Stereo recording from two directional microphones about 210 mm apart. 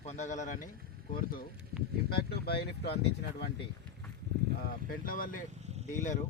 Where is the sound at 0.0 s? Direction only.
30° left (ahead or behind); by 3.2 s 50° left (ahead or behind).